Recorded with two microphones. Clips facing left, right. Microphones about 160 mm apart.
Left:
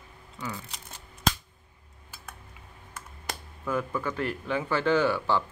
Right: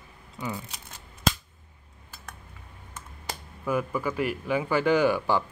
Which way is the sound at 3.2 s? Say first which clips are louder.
Right 3 dB; 10° right (ahead or behind).